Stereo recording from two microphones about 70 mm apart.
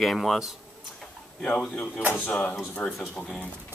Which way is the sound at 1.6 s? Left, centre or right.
Centre.